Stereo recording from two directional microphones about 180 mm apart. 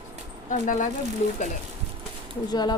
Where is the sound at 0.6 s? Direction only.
50° left (ahead or behind).